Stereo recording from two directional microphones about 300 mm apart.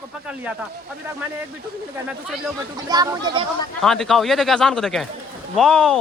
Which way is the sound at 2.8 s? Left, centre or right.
Centre.